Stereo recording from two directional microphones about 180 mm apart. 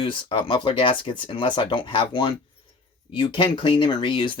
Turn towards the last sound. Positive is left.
turn(degrees=30)  # may be behind; listen again after turning